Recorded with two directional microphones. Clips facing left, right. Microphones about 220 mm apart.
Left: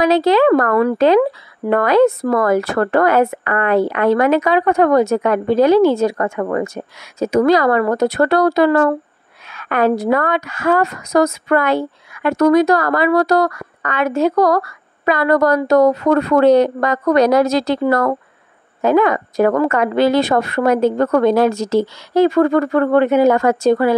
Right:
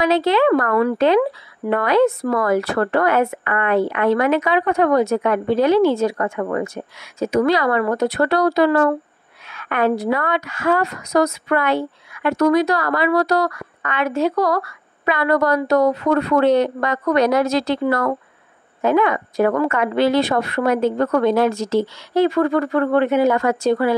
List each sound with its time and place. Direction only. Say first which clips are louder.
0.0 s a woman's voice: left 4 dB; 40° left (ahead or behind)